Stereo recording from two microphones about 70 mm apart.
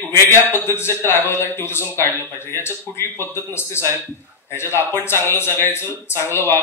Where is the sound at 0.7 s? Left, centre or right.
Left.